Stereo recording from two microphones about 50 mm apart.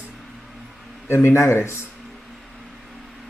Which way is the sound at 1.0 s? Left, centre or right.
Left.